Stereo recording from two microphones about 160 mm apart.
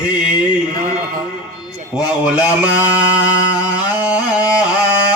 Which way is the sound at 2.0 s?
5° right (ahead or behind).